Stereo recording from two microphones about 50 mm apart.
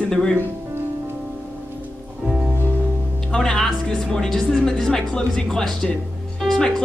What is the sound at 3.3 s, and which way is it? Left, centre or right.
Speech, centre.